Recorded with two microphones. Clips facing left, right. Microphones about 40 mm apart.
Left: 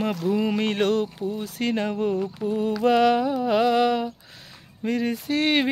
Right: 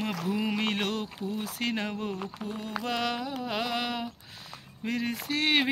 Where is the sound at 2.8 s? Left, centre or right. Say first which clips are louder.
Left 13 dB; centre.